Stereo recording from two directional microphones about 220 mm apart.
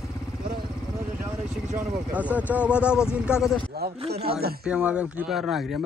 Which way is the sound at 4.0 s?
25° right (ahead or behind).